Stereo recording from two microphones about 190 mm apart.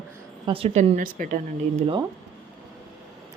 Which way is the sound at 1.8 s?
25° right (ahead or behind).